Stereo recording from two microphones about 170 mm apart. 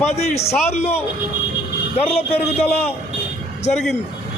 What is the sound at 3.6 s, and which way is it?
Speech, 40° left (ahead or behind).